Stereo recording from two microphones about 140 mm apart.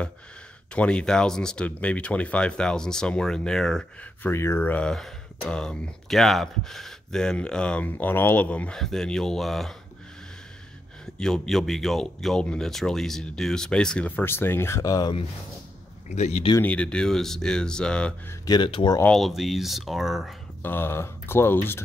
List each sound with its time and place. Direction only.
0.7 s speech: 5° left (ahead or behind)
4.3 s speech: 20° left (ahead or behind); by 9.8 s centre (ahead or behind)
11.1 s speech: 5° left (ahead or behind); by 15.1 s 25° left (ahead or behind)
16.1 s speech: 55° left (ahead or behind)
16.6 s speech: 10° left (ahead or behind)
18.5 s speech: 35° left (ahead or behind)
19.0 s speech: centre (ahead or behind)
20.6 s speech: 15° left (ahead or behind)